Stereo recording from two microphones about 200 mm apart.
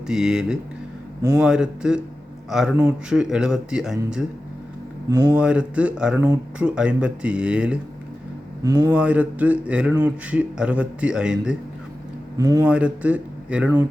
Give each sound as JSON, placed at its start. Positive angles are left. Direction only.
{"t": 0.1, "sound": "speech", "side_deg": -5}
{"t": 5.0, "sound": "speech", "side_deg": -20}
{"t": 5.3, "sound": "speech", "side_deg": -5}
{"t": 8.6, "sound": "speech", "side_deg": -20}
{"t": 8.9, "sound": "a man's voice", "side_deg": -5}
{"t": 12.4, "sound": "a man's voice", "side_deg": -20}
{"t": 12.6, "sound": "a man's voice", "side_deg": -5}